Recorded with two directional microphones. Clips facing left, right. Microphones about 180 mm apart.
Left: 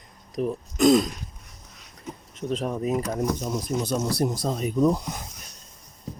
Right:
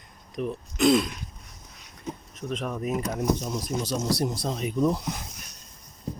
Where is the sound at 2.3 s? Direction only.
30° left (ahead or behind).